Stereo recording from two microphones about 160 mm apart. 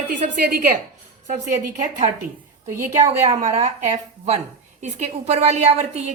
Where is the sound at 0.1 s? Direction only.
65° right (ahead or behind).